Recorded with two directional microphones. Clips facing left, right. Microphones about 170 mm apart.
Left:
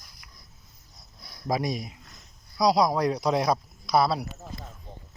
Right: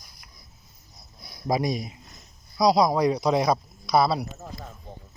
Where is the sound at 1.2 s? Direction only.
15° right (ahead or behind).